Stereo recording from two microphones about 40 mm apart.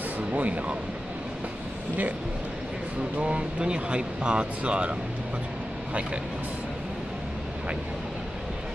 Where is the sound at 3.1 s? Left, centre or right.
Right.